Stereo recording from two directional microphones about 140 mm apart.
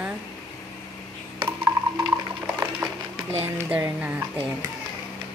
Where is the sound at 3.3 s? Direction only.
15° right (ahead or behind).